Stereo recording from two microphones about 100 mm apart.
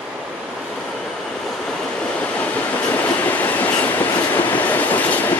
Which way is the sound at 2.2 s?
15° left (ahead or behind).